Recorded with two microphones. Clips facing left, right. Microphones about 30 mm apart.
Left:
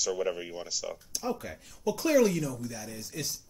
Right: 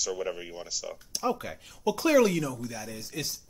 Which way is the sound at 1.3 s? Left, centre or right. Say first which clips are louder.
Right 4 dB; right.